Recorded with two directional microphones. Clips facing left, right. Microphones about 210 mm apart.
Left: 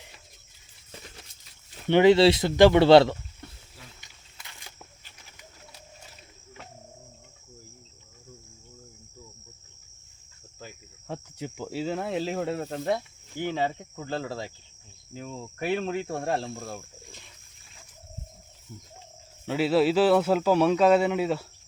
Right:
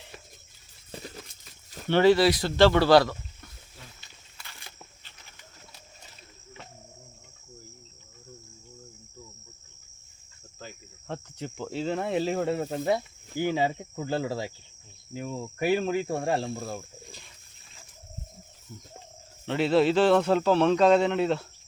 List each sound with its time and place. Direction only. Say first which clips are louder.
1.9 s speech: left 2 dB; 20° left (ahead or behind)
10.6 s cricket: right 1 dB; 10° left (ahead or behind)
15.1 s speech: right 4 dB; 5° right (ahead or behind)
19.5 s speech: even; 5° left (ahead or behind)